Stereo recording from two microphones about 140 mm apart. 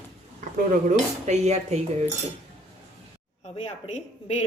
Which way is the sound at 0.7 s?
60° right (ahead or behind).